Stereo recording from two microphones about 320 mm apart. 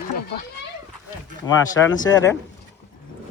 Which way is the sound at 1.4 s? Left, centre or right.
Centre.